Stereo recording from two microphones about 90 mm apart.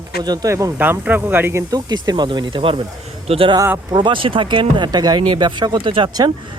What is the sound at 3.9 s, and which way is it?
Speech, 60° right (ahead or behind).